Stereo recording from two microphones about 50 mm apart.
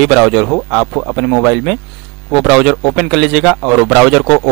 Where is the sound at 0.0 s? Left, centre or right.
Centre.